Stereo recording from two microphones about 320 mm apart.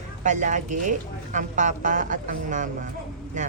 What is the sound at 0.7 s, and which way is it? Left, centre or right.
Speech, right.